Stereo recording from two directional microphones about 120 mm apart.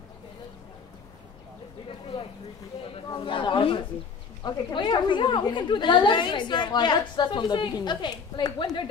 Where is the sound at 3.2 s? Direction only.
45° left (ahead or behind).